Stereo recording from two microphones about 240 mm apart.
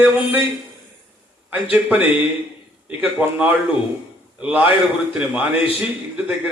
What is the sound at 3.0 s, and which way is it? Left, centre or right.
A man's voice, centre.